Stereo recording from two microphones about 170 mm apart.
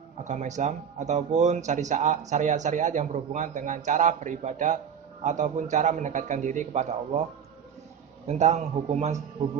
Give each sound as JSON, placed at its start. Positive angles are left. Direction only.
{"t": 0.3, "sound": "speech", "side_deg": -45}
{"t": 8.3, "sound": "a man's voice", "side_deg": -40}